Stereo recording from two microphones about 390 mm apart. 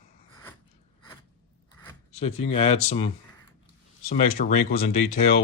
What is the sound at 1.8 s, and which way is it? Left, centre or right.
Speech, centre.